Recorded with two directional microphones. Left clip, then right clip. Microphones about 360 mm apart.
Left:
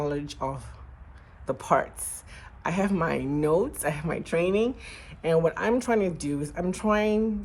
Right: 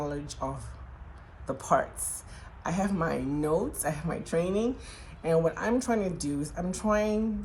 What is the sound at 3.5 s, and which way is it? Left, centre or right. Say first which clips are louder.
Speech: left 4 dB; centre.